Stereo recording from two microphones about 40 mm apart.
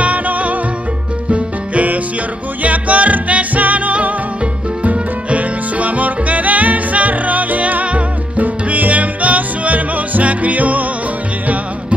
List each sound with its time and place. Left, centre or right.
0.0 s music: right